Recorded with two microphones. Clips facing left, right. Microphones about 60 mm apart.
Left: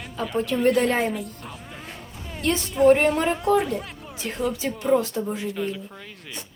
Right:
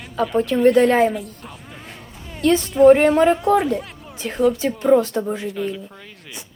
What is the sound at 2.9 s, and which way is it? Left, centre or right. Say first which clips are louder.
Speech: right 6 dB; right.